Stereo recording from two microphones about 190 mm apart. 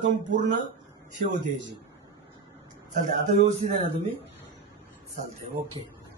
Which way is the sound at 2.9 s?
40° right (ahead or behind).